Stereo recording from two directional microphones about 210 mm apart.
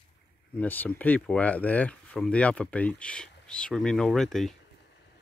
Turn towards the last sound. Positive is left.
turn(degrees=0)  # may be behind; listen again after turning